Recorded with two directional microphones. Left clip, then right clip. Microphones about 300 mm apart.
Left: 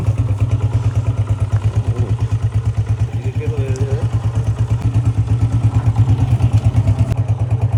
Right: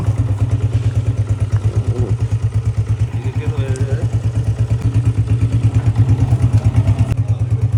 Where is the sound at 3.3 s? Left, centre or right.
Centre.